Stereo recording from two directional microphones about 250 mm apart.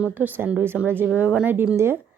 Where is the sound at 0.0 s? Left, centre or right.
Centre.